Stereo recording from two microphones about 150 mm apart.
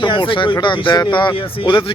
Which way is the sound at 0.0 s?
30° left (ahead or behind).